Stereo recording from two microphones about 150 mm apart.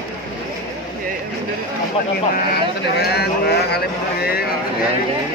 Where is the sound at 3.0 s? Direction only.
90° left.